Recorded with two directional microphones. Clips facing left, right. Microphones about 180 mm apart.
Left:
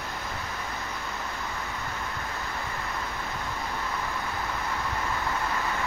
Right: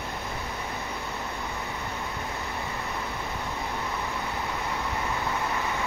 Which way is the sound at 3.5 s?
15° right (ahead or behind).